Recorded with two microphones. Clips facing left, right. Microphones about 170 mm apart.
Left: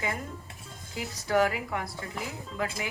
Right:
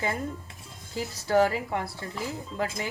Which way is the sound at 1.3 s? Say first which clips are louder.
Right 3 dB; 30° right (ahead or behind).